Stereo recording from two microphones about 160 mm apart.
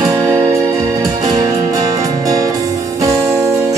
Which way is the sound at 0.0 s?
25° right (ahead or behind).